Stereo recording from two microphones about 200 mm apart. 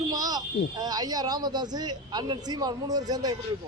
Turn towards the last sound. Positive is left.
turn(degrees=-20)  # may be behind; listen again after turning